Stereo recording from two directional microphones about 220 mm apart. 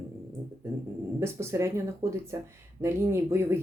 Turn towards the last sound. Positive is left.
turn(degrees=-10)  # may be behind; listen again after turning